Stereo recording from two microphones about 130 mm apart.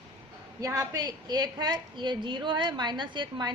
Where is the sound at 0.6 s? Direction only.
25° right (ahead or behind).